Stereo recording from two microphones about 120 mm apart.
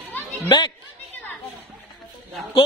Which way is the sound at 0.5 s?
40° left (ahead or behind).